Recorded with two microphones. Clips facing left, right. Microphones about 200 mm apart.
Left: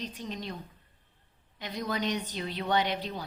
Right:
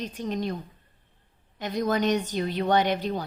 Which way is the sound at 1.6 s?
50° right (ahead or behind).